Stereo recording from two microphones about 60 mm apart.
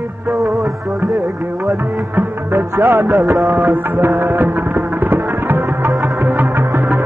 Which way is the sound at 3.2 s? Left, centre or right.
Right.